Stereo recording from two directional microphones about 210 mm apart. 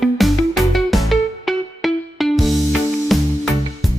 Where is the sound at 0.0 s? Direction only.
Centre (ahead or behind).